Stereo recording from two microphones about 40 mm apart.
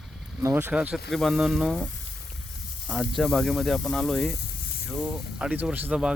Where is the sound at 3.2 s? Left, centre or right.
Centre.